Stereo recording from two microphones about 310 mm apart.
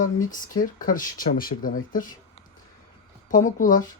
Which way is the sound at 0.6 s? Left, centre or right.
Left.